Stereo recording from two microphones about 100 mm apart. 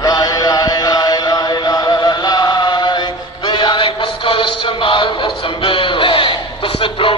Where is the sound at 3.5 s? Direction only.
50° left (ahead or behind).